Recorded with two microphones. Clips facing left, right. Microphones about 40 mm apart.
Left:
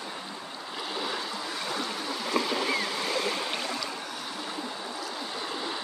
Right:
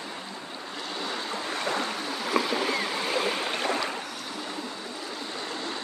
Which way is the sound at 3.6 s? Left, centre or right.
Right.